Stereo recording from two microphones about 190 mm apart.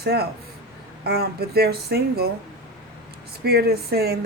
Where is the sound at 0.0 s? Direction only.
55° right (ahead or behind).